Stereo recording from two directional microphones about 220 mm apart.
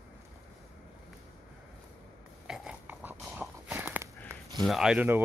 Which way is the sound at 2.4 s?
5° right (ahead or behind).